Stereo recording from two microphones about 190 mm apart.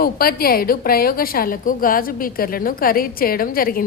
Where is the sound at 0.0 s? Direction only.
50° left (ahead or behind).